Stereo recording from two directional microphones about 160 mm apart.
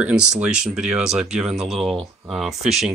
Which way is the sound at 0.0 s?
5° right (ahead or behind).